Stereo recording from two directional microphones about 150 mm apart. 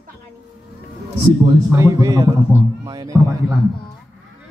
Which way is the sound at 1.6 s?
20° right (ahead or behind).